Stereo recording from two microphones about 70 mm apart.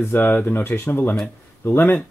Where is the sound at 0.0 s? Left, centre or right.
Left.